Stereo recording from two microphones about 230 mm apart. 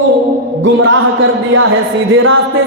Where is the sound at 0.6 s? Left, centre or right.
Right.